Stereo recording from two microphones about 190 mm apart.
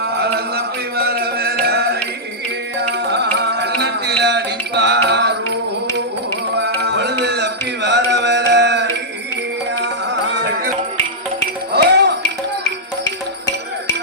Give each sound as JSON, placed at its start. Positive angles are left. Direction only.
{"t": 0.0, "sound": "a sound", "side_deg": -55}
{"t": 1.6, "sound": "music", "side_deg": -55}
{"t": 3.0, "sound": "music", "side_deg": -60}
{"t": 6.6, "sound": "music", "side_deg": -65}
{"t": 10.3, "sound": "music", "side_deg": -60}
{"t": 11.7, "sound": "music", "side_deg": -60}